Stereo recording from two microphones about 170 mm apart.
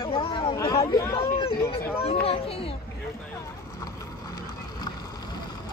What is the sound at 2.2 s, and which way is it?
Speech, 35° left (ahead or behind).